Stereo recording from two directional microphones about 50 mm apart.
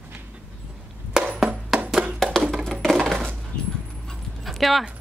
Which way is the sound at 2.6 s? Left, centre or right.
Centre.